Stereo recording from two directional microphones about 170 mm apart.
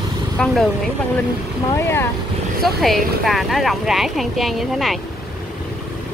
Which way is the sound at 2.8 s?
Centre (ahead or behind).